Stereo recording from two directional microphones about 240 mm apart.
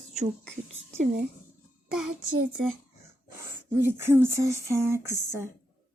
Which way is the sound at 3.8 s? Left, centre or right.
Centre.